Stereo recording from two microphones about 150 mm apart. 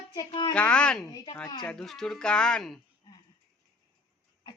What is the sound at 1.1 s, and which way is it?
Speech, 30° left (ahead or behind).